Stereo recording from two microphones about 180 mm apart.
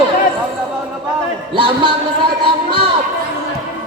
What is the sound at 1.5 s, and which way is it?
Speech, 25° right (ahead or behind).